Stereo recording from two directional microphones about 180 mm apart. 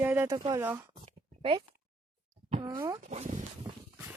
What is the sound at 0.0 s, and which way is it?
Speech, 10° right (ahead or behind).